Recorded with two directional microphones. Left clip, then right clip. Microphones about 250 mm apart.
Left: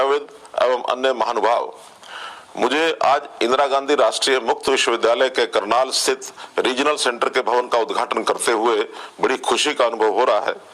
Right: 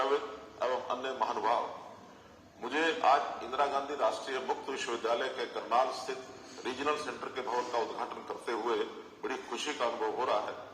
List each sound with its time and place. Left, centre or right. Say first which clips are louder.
0.7 s speech: left 15 dB; left
2.6 s speech: left 13 dB; left